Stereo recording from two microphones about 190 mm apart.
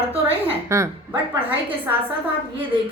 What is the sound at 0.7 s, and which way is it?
Speech, 15° right (ahead or behind).